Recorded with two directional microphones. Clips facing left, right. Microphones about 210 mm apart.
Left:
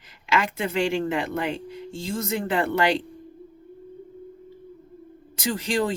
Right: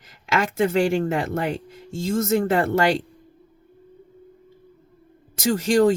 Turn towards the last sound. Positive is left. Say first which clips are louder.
# right 7 dB
turn(degrees=-45)  # may be behind; listen again after turning